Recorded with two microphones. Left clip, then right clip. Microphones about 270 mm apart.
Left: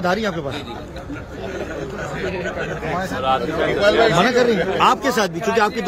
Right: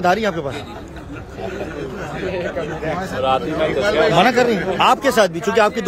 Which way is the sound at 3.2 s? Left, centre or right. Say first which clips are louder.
Right 2 dB; right.